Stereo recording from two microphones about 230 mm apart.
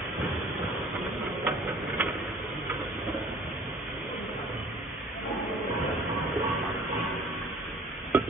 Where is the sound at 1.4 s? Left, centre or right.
Centre.